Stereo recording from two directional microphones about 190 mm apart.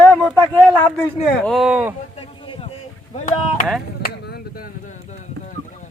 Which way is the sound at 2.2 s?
30° left (ahead or behind).